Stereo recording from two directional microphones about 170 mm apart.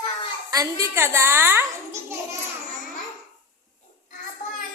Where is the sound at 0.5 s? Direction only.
20° right (ahead or behind).